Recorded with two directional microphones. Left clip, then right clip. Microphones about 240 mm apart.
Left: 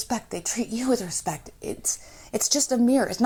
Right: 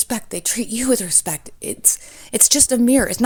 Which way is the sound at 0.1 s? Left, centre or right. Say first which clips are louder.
Right 4 dB; right.